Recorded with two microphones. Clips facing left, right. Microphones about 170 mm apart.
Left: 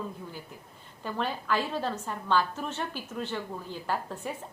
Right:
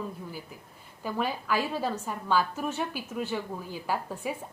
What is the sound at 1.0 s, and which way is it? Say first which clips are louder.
A woman's voice: right 2 dB; 10° right (ahead or behind).